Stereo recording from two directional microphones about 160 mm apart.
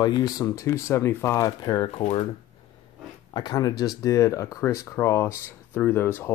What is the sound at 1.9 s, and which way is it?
Speech, 40° left (ahead or behind).